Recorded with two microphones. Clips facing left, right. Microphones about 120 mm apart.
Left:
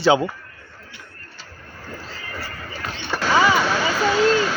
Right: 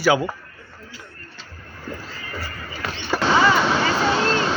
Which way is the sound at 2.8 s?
90° right.